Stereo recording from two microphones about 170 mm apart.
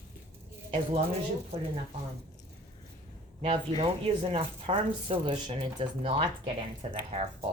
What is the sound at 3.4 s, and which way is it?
A woman's voice, 35° right (ahead or behind).